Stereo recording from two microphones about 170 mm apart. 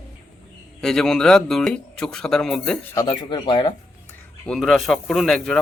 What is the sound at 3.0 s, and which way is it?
Speech, 25° left (ahead or behind).